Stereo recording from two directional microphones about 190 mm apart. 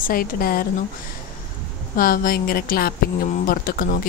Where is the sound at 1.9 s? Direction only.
50° left (ahead or behind).